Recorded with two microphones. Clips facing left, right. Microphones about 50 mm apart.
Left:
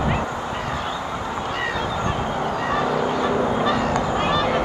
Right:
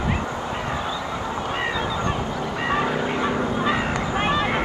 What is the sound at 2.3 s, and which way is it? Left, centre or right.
Honk, left.